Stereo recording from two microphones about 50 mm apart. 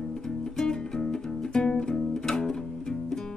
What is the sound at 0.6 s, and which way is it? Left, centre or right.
Music, centre.